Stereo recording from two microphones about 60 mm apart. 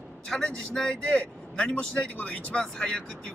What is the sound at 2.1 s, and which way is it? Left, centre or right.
Speech, left.